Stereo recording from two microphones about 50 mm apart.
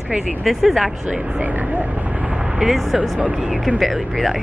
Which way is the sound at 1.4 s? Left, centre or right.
Right.